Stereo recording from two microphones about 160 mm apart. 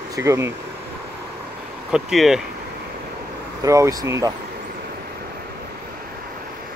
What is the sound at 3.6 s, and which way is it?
Speech, 20° right (ahead or behind).